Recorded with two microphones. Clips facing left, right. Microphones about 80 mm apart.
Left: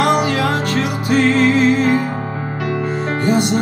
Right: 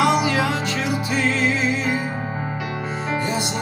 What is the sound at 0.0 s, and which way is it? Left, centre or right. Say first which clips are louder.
Music: left 3 dB; left.